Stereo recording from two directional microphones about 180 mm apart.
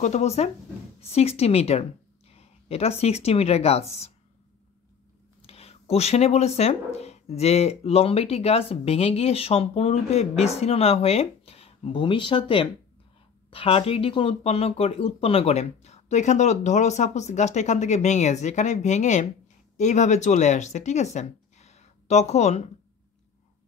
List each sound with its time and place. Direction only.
0.0 s a woman's voice: 40° left (ahead or behind)
5.4 s speech: 35° left (ahead or behind)